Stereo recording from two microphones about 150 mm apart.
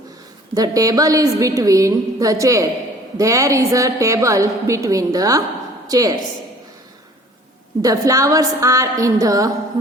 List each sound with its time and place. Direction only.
0.5 s a woman's voice: 25° right (ahead or behind)
7.8 s a woman's voice: 20° right (ahead or behind)